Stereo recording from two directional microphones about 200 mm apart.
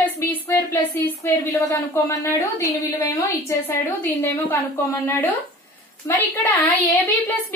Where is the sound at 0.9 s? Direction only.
10° left (ahead or behind).